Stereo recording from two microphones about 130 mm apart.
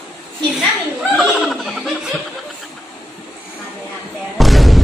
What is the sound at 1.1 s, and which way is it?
Laughter, centre (ahead or behind).